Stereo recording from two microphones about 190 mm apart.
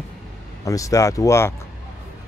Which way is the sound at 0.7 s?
15° left (ahead or behind).